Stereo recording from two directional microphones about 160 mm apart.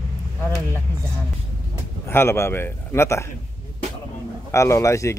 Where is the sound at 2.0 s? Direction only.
15° left (ahead or behind).